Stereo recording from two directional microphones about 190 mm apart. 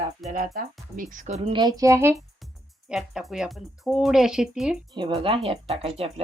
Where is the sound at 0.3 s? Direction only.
45° right (ahead or behind).